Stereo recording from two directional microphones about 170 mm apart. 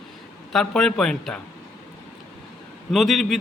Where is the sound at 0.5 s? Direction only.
5° left (ahead or behind).